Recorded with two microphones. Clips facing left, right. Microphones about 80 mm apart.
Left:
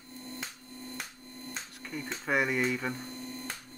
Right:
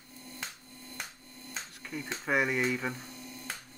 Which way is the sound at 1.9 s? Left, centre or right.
Centre.